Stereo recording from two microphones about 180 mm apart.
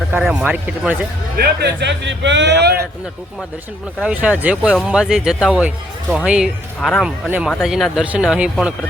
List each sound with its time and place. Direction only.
0.1 s speech: 5° right (ahead or behind)
1.4 s speech: 65° right (ahead or behind)
4.0 s speech: 5° right (ahead or behind)